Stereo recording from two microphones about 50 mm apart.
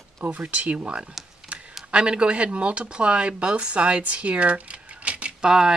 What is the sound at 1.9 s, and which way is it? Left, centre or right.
Speech, right.